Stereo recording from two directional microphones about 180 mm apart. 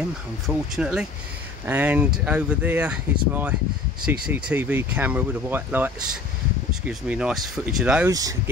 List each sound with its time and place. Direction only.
0.5 s speech: centre (ahead or behind)
8.1 s speech: 20° right (ahead or behind)